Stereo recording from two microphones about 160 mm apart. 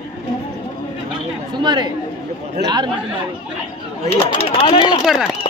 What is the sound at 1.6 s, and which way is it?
Speech, 30° right (ahead or behind).